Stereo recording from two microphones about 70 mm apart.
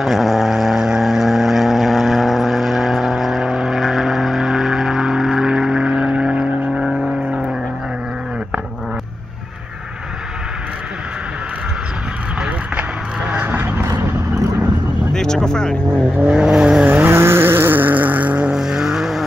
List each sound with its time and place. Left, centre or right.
0.0 s vehicle: centre
13.3 s a sound: right
15.1 s vehicle: centre
16.2 s vehicle: centre
16.8 s vehicle: right
17.1 s vehicle: right
18.5 s vehicle: centre